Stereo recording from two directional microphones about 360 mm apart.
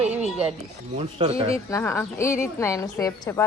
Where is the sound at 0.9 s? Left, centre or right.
Centre.